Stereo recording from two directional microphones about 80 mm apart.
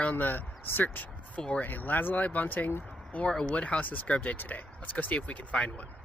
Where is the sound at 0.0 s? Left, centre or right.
Left.